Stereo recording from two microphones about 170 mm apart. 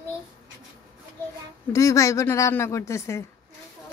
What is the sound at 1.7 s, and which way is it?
Speech, 20° left (ahead or behind).